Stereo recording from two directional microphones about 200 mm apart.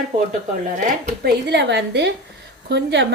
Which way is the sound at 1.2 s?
60° right (ahead or behind).